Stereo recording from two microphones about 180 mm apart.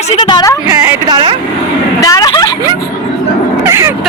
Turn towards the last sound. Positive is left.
turn(degrees=-15)  # may be behind; listen again after turning